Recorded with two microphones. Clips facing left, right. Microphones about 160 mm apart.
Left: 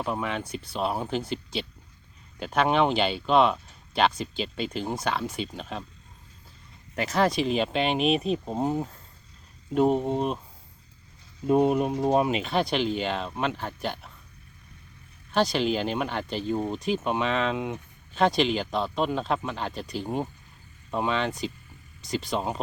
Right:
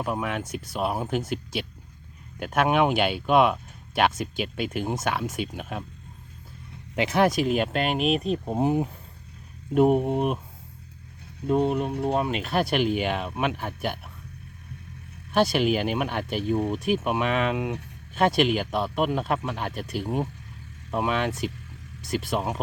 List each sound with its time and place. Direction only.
0.0 s speech: 5° right (ahead or behind)
0.4 s speech: 45° right (ahead or behind)
0.7 s speech: 10° right (ahead or behind)
2.4 s speech: 10° right (ahead or behind)
6.9 s speech: 15° right (ahead or behind)
11.4 s speech: 10° left (ahead or behind)
12.3 s speech: centre (ahead or behind)
15.3 s speech: 10° right (ahead or behind)